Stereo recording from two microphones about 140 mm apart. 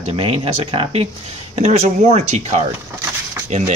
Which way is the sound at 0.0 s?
40° right (ahead or behind).